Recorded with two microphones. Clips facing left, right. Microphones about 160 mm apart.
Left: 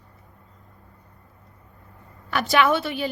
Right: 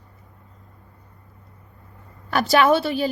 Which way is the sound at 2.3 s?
40° right (ahead or behind).